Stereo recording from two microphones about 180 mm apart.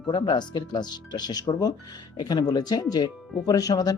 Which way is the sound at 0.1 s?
25° left (ahead or behind).